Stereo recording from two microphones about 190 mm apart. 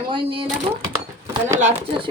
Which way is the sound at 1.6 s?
35° right (ahead or behind).